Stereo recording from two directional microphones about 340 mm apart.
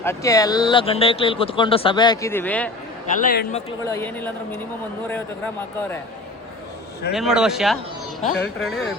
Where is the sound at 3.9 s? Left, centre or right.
Centre.